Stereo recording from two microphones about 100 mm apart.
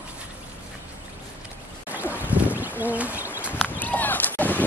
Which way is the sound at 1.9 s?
15° right (ahead or behind).